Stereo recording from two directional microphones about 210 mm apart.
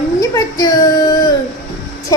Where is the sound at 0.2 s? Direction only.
15° left (ahead or behind).